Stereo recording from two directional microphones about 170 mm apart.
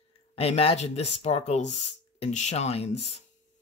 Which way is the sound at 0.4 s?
35° left (ahead or behind).